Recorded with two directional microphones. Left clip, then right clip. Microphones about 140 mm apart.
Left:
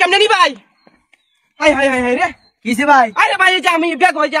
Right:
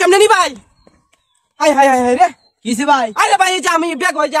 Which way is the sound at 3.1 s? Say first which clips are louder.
Even; 30° right (ahead or behind).